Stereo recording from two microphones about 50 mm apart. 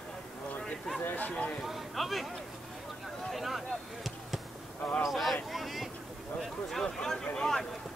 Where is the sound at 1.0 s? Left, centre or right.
Left.